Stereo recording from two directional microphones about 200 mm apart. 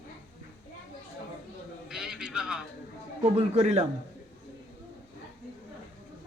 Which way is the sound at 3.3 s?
35° right (ahead or behind).